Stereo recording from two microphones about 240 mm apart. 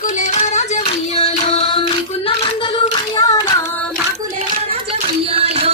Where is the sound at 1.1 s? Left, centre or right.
Left.